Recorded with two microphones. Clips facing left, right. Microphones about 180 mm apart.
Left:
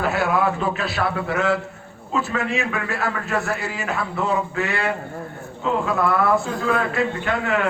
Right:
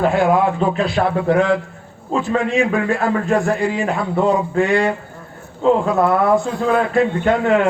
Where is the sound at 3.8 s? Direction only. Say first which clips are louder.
Right 7 dB; 30° right (ahead or behind).